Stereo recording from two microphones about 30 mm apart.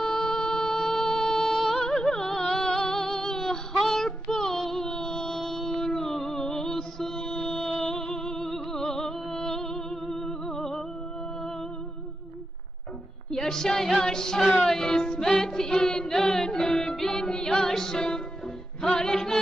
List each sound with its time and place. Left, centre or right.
0.0 s music: centre
4.3 s child singing: centre
5.3 s music: centre
13.3 s music: centre